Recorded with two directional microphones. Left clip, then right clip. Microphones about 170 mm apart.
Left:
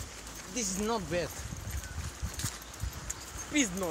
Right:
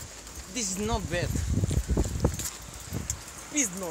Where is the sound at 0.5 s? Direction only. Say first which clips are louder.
Right 2 dB; 70° right (ahead or behind).